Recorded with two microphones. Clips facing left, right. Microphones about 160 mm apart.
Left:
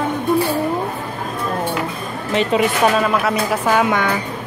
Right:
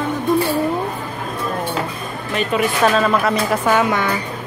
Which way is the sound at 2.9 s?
5° left (ahead or behind).